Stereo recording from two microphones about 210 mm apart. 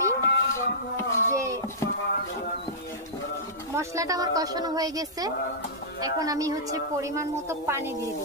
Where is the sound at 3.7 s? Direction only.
15° right (ahead or behind).